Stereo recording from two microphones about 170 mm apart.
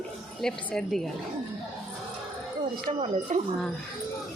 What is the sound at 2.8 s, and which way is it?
Speech, 40° right (ahead or behind).